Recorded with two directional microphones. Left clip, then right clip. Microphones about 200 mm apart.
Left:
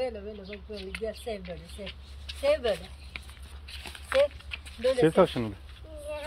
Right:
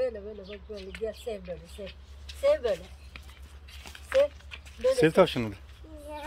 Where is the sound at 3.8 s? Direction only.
55° left (ahead or behind).